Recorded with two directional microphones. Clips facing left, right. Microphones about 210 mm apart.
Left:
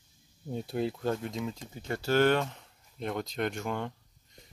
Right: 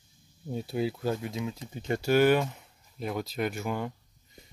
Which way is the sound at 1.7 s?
20° right (ahead or behind).